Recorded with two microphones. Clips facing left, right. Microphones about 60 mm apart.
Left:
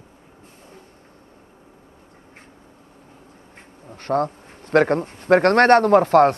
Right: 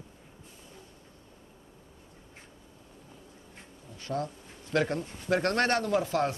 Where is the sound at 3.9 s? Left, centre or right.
Left.